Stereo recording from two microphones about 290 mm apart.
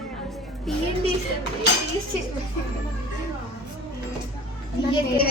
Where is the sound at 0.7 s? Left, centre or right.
Centre.